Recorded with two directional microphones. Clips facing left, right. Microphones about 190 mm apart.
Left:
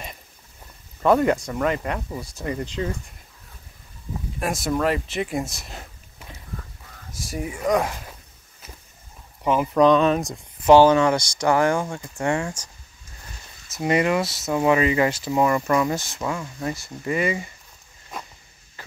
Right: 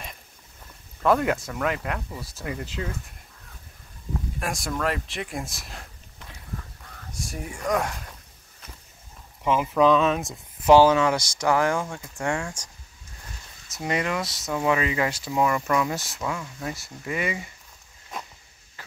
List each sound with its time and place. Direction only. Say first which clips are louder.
1.0 s speech: left 4 dB; centre (ahead or behind)
2.0 s speech: left 4 dB; 15° left (ahead or behind)
2.2 s speech: left 5 dB; centre (ahead or behind)
4.4 s speech: left 6 dB; centre (ahead or behind)
9.4 s speech: left 3 dB; centre (ahead or behind)
13.7 s speech: left 6 dB; 5° left (ahead or behind)
18.8 s a sound: left 5 dB; 5° right (ahead or behind)